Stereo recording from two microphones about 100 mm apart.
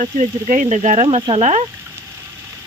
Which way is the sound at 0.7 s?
90° right.